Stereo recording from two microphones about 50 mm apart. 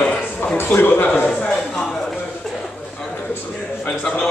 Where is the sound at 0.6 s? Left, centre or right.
Left.